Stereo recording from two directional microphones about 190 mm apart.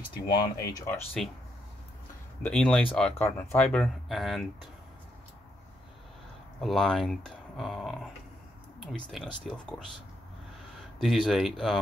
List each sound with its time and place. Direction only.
0.3 s speech: 20° left (ahead or behind)
2.4 s speech: 5° left (ahead or behind)
6.6 s speech: centre (ahead or behind)
11.0 s speech: centre (ahead or behind)